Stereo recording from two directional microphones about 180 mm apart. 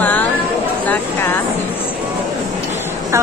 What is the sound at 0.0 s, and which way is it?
Chatter, 10° left (ahead or behind).